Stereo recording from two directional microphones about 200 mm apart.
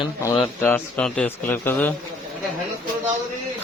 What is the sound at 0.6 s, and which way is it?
A man's voice, 10° left (ahead or behind).